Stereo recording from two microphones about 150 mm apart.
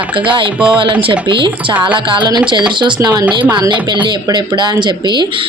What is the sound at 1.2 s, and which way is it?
Speech, 35° right (ahead or behind).